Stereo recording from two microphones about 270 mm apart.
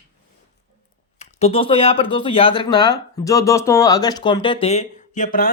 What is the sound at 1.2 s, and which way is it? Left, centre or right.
Speech, left.